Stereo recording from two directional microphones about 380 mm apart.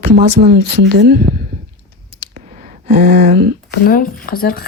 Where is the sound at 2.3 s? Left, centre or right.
Centre.